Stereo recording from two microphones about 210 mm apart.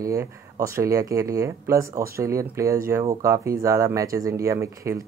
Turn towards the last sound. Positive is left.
turn(degrees=-15)  # may be behind; listen again after turning